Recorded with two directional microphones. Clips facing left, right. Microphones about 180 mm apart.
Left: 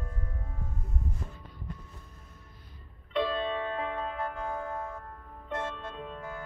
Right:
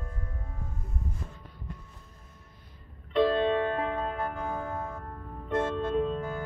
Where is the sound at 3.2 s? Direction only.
45° right (ahead or behind).